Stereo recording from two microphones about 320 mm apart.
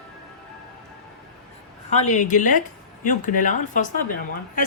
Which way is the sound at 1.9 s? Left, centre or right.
Left.